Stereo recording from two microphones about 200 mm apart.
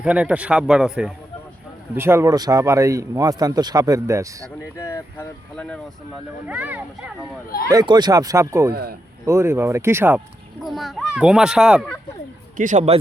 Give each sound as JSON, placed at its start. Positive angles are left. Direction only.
{"t": 0.0, "sound": "speech", "side_deg": -5}
{"t": 4.8, "sound": "speech", "side_deg": 15}
{"t": 6.5, "sound": "speech", "side_deg": -5}
{"t": 7.7, "sound": "speech", "side_deg": -20}
{"t": 8.7, "sound": "speech", "side_deg": -50}
{"t": 9.2, "sound": "speech", "side_deg": -15}
{"t": 10.6, "sound": "speech", "side_deg": 0}
{"t": 12.5, "sound": "a man's voice", "side_deg": -40}